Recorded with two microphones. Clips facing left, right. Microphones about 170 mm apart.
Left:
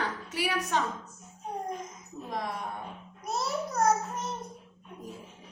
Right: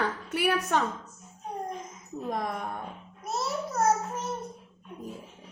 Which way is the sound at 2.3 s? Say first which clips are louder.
Right 3 dB; 50° right (ahead or behind).